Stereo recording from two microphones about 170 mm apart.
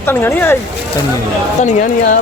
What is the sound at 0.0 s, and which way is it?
Speech, 15° left (ahead or behind).